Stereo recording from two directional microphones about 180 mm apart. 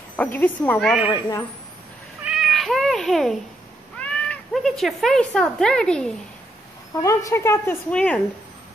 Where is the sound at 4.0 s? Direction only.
5° left (ahead or behind).